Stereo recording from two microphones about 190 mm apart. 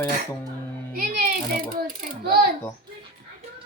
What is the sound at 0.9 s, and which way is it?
Mechanisms, 50° right (ahead or behind).